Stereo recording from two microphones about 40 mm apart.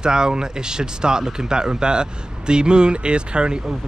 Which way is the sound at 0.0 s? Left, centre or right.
Centre.